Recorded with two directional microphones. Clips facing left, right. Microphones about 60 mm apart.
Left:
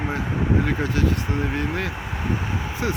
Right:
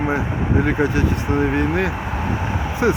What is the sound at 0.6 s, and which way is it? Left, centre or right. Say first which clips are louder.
Speech: right 5 dB; right.